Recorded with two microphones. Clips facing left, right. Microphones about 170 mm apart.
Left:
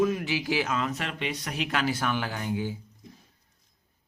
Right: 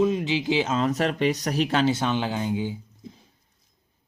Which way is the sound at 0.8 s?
40° right (ahead or behind).